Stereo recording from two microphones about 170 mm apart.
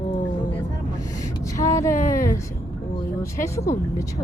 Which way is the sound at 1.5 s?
20° left (ahead or behind).